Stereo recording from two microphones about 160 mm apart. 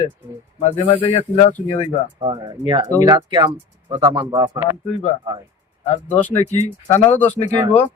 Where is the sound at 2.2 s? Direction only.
25° right (ahead or behind).